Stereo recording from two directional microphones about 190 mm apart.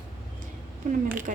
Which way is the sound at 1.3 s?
45° right (ahead or behind).